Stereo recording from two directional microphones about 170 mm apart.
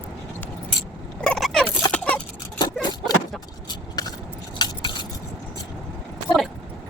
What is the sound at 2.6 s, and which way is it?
Vehicle, 25° left (ahead or behind).